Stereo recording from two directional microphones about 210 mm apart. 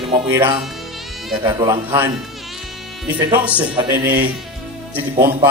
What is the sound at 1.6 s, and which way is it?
Speech, 10° right (ahead or behind).